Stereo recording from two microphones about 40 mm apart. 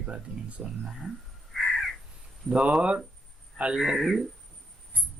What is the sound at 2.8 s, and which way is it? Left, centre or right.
Speech, right.